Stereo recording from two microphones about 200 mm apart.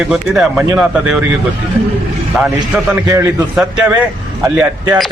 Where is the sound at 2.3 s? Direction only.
Centre (ahead or behind).